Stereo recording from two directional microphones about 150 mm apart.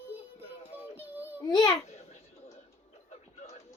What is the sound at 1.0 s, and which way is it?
Child singing, 10° right (ahead or behind).